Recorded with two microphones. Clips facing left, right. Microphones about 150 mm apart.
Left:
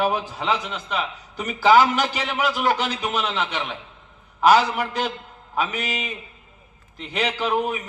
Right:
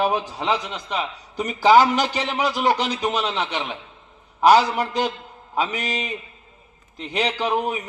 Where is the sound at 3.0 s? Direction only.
35° right (ahead or behind).